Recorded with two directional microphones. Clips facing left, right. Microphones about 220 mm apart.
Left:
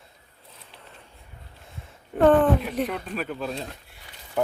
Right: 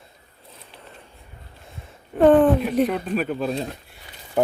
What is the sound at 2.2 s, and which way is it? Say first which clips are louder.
Speech: right 3 dB; 15° right (ahead or behind).